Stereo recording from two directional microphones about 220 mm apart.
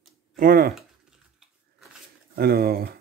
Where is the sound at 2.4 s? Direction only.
45° right (ahead or behind).